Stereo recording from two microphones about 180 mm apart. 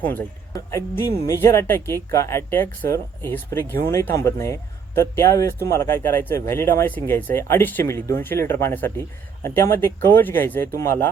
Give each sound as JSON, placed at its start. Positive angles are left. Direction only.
{"t": 0.0, "sound": "speech", "side_deg": 10}